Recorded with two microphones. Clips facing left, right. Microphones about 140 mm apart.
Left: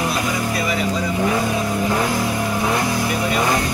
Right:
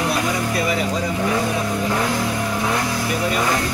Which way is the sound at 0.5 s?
40° right (ahead or behind).